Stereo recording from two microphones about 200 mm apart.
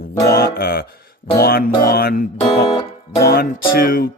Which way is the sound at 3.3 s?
50° left (ahead or behind).